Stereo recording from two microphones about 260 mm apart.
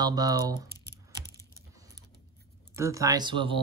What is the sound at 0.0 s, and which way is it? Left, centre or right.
Speech, centre.